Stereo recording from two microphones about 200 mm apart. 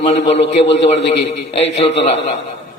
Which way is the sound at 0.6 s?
60° left (ahead or behind).